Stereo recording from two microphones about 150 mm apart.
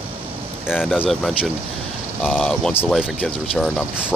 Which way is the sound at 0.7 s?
5° right (ahead or behind).